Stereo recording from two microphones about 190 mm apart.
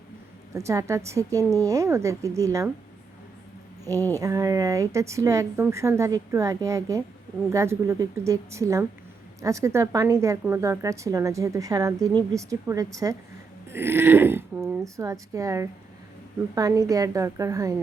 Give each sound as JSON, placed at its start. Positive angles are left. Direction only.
{"t": 0.5, "sound": "speech", "side_deg": -15}
{"t": 4.2, "sound": "speech", "side_deg": -15}